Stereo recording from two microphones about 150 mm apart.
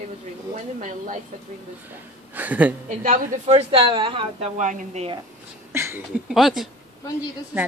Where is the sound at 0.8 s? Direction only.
55° right (ahead or behind).